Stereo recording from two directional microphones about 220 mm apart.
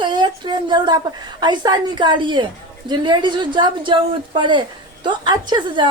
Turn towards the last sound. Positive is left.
turn(degrees=-20)  # may be behind; listen again after turning